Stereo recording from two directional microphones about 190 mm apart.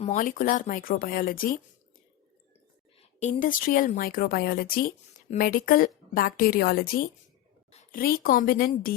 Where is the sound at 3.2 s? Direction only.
45° left (ahead or behind).